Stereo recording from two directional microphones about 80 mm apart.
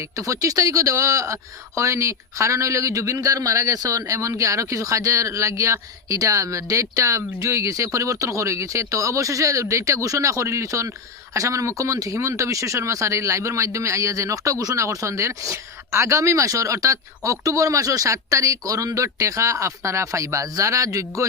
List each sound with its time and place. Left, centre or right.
0.2 s speech: right